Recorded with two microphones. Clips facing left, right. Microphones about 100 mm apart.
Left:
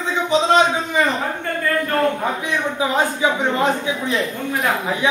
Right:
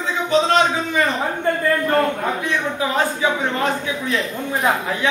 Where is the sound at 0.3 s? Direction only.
15° left (ahead or behind).